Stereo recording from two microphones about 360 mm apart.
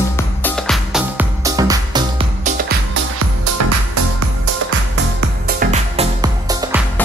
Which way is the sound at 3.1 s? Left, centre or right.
Right.